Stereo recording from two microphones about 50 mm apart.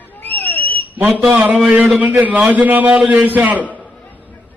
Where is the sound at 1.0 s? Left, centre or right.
Right.